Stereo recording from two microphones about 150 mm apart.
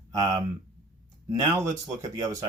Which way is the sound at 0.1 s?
25° right (ahead or behind).